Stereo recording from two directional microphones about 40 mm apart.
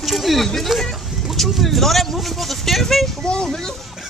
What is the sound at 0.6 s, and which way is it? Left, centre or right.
Speech, centre.